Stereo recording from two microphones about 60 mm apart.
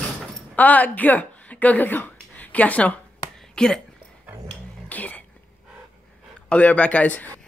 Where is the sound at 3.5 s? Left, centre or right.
Centre.